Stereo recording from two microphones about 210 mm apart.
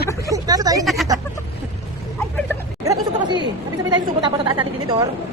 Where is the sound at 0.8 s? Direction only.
Centre (ahead or behind).